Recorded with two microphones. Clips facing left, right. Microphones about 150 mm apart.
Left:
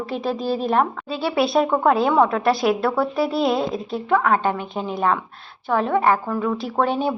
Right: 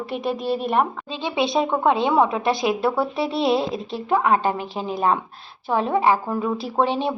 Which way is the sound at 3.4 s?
30° right (ahead or behind).